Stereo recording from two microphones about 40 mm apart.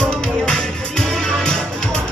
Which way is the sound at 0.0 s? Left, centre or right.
Centre.